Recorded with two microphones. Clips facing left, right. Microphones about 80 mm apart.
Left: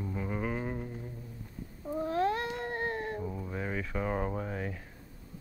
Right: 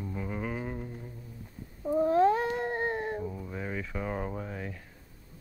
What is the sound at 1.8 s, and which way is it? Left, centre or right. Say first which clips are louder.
Cat: right 8 dB; centre.